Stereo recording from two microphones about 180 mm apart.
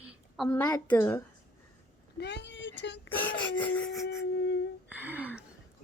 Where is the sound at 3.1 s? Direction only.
10° left (ahead or behind).